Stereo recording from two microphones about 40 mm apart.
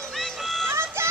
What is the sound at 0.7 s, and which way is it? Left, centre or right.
Run, right.